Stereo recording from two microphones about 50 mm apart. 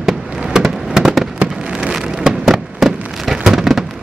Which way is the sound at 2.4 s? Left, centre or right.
Centre.